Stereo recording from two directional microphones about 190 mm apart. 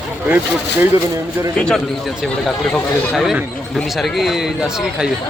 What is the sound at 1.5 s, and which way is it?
Speech, 5° left (ahead or behind).